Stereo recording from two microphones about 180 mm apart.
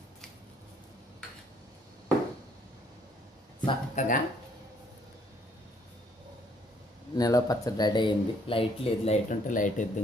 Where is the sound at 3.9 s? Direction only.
50° left (ahead or behind).